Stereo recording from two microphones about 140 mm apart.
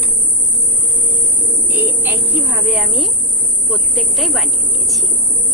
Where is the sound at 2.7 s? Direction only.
Centre (ahead or behind).